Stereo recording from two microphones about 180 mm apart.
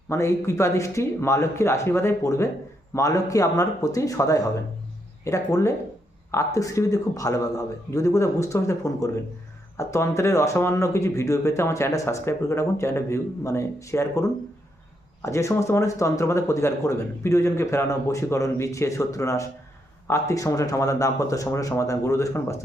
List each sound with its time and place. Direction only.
0.1 s speech: 15° left (ahead or behind)